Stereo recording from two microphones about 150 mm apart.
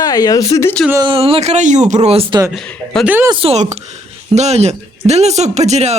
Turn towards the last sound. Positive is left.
turn(degrees=-45)  # may be behind; listen again after turning